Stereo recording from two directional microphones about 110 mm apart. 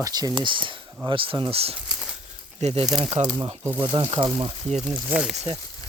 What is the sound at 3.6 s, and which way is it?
Speech, 20° right (ahead or behind).